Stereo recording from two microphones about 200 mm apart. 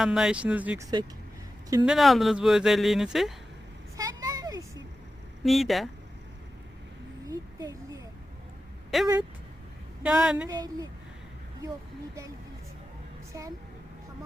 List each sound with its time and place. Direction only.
0.0 s speech: 5° right (ahead or behind)
3.9 s a sound: 20° right (ahead or behind)
5.4 s speech: centre (ahead or behind)
7.3 s a sound: 15° right (ahead or behind)
8.9 s speech: centre (ahead or behind)
10.5 s a woman's voice: 20° right (ahead or behind)